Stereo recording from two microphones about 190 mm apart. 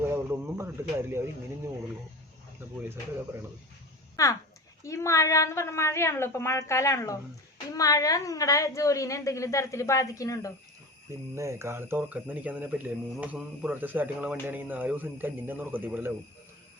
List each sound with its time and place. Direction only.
0.0 s a sound: 15° right (ahead or behind)
4.2 s a woman's voice: 15° left (ahead or behind)
11.3 s speech: 15° right (ahead or behind)